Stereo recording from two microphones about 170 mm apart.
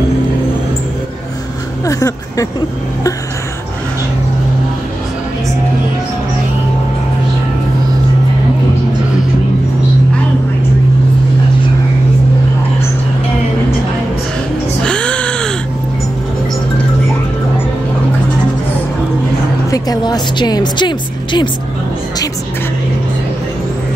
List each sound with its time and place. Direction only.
1.9 s speech: 20° left (ahead or behind)
14.8 s music: 5° left (ahead or behind)
19.7 s a woman's voice: 25° left (ahead or behind)